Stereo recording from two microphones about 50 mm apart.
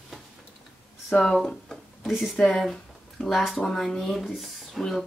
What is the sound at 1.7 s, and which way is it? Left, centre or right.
Music, centre.